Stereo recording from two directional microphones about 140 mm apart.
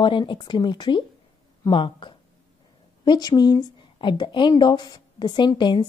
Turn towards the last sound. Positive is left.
turn(degrees=35)  # may be behind; listen again after turning